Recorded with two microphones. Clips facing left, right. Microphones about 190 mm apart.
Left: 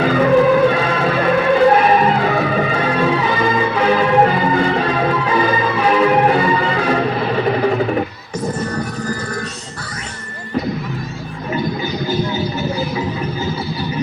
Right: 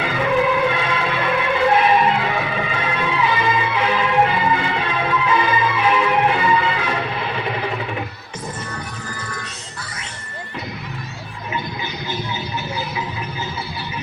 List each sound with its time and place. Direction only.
0.0 s music: 40° left (ahead or behind)